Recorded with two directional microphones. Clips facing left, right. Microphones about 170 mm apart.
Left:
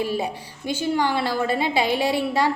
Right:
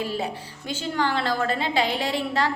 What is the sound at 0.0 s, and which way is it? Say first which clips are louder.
A woman's voice: left 3 dB; 15° left (ahead or behind).